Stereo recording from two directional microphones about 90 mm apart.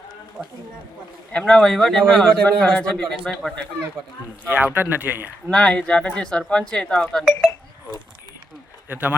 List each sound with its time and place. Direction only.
0.4 s speech: 10° right (ahead or behind)
1.3 s speech: 10° left (ahead or behind)
2.4 s speech: 15° left (ahead or behind)
4.4 s speech: 15° right (ahead or behind)
5.5 s speech: 10° left (ahead or behind)
8.9 s speech: 20° right (ahead or behind)